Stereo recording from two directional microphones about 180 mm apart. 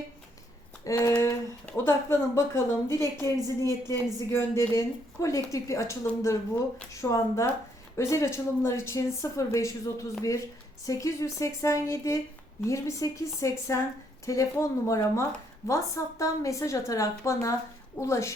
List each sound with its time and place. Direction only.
0.9 s a woman's voice: 15° left (ahead or behind)